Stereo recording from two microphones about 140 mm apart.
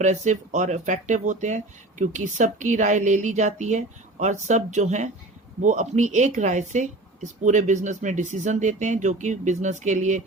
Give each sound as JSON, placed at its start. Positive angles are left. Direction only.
{"t": 0.0, "sound": "speech", "side_deg": -60}